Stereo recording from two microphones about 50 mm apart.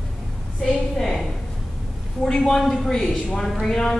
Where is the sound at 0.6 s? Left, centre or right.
Centre.